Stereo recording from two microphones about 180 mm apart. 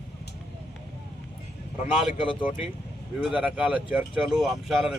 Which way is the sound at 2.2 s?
30° left (ahead or behind).